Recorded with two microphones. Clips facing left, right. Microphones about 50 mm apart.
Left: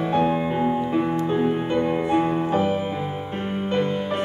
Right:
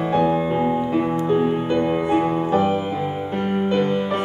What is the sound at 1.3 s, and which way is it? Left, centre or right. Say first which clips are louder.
Music: right 4 dB; right.